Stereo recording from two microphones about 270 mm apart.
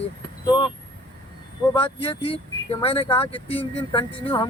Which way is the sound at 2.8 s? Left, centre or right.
Left.